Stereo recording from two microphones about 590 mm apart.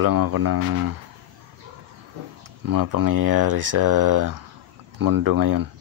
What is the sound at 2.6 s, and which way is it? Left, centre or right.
Speech, right.